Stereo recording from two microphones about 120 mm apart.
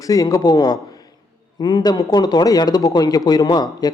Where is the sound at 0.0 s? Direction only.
30° left (ahead or behind).